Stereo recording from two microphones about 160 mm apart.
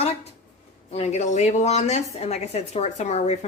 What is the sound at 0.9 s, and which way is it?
A woman's voice, 40° left (ahead or behind).